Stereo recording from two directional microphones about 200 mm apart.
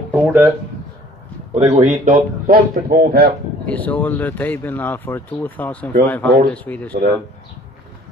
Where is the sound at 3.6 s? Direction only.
5° left (ahead or behind).